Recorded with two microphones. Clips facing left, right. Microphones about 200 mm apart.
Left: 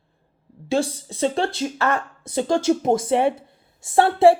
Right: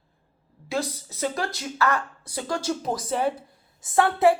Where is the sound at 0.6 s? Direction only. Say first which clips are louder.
Left 7 dB; 30° left (ahead or behind).